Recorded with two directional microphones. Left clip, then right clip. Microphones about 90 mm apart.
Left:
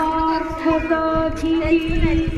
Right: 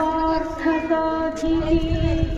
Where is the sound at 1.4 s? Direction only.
25° right (ahead or behind).